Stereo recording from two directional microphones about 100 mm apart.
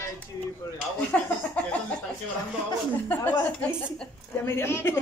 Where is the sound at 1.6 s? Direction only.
15° left (ahead or behind).